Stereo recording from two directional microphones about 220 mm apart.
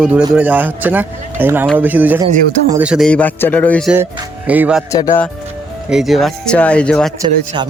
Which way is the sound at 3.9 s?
10° right (ahead or behind).